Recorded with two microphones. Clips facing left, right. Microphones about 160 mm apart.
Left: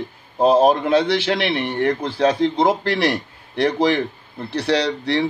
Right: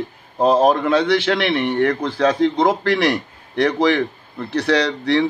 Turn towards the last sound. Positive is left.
turn(degrees=30)  # may be behind; listen again after turning